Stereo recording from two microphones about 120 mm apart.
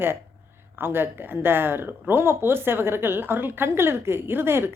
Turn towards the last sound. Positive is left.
turn(degrees=-20)  # may be behind; listen again after turning